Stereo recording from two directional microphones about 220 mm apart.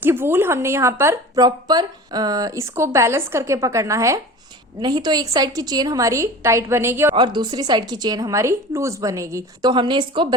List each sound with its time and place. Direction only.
0.0 s a woman's voice: 10° right (ahead or behind)